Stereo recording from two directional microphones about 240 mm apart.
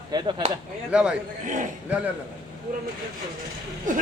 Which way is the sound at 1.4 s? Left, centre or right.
Right.